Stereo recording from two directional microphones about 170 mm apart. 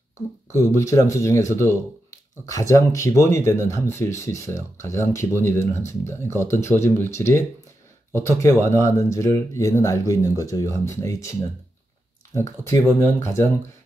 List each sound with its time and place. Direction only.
0.5 s speech: 15° left (ahead or behind)
12.4 s speech: 15° left (ahead or behind)